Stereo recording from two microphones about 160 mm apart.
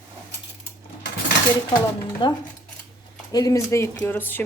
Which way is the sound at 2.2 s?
30° left (ahead or behind).